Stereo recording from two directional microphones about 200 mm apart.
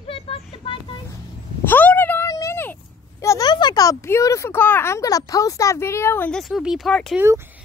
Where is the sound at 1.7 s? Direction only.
10° left (ahead or behind).